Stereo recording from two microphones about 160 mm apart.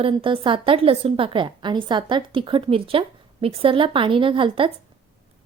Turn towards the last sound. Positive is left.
turn(degrees=-35)  # may be behind; listen again after turning